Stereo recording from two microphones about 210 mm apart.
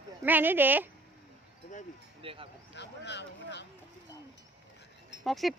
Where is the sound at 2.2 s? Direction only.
25° right (ahead or behind).